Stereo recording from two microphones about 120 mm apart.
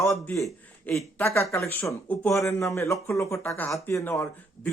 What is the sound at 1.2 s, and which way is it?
Speech, 25° left (ahead or behind).